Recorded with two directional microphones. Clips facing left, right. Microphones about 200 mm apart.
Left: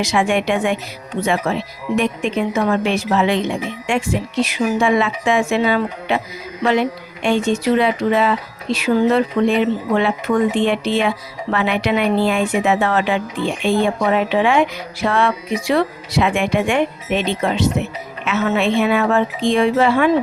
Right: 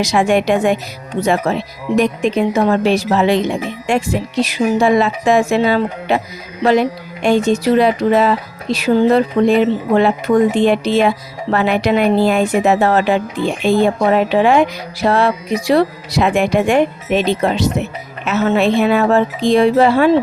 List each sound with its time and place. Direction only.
0.0 s speech: 40° right (ahead or behind)